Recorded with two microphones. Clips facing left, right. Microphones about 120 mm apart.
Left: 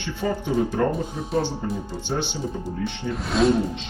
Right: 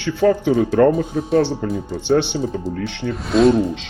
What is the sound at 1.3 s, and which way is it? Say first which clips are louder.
Speech: right 7 dB; 70° right (ahead or behind).